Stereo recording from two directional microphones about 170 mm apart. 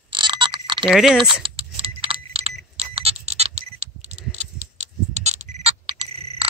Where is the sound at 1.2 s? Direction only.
30° right (ahead or behind).